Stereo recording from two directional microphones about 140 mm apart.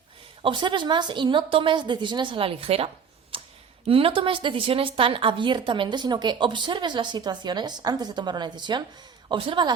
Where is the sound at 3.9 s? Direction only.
40° right (ahead or behind).